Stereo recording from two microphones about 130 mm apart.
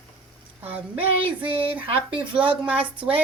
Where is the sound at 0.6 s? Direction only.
10° right (ahead or behind).